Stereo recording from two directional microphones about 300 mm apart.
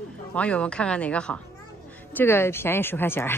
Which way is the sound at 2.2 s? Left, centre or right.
Centre.